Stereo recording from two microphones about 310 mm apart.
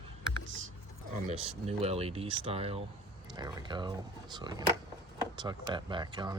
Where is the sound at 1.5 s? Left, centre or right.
Centre.